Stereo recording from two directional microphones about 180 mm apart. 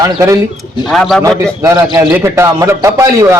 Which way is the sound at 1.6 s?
15° right (ahead or behind).